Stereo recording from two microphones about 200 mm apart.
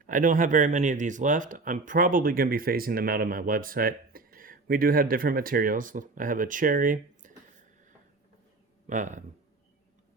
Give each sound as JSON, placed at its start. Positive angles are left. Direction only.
{"t": 0.0, "sound": "speech", "side_deg": -40}
{"t": 8.9, "sound": "speech", "side_deg": -40}